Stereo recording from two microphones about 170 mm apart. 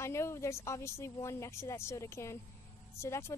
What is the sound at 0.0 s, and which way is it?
Speech, 15° left (ahead or behind).